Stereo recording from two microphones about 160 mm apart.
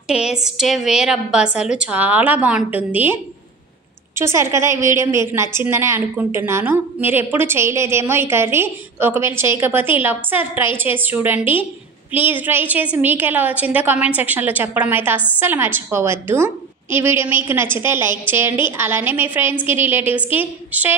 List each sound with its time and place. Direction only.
0.1 s a woman's voice: 5° right (ahead or behind)